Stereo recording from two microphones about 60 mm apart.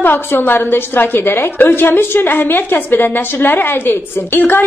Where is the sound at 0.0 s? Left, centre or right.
Left.